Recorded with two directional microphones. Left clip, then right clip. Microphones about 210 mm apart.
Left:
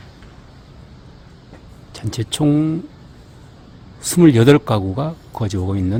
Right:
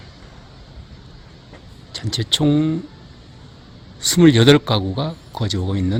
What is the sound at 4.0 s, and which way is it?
Speech, 5° left (ahead or behind).